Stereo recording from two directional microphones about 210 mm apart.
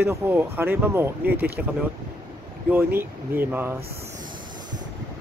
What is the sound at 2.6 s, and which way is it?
Speech, 10° right (ahead or behind).